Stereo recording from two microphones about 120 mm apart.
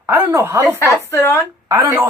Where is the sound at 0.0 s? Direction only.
20° right (ahead or behind).